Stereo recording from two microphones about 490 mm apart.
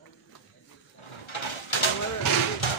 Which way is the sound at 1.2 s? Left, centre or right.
Left.